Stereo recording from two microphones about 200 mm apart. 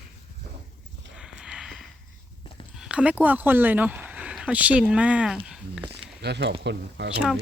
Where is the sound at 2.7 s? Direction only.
5° right (ahead or behind).